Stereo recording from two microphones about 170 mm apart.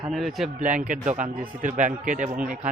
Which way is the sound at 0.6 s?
50° right (ahead or behind).